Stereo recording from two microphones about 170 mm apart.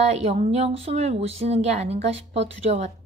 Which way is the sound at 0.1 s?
40° right (ahead or behind).